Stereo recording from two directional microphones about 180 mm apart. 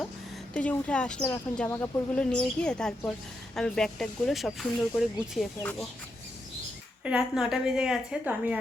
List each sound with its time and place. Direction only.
0.5 s a woman's voice: 5° left (ahead or behind)
7.0 s a woman's voice: 5° right (ahead or behind)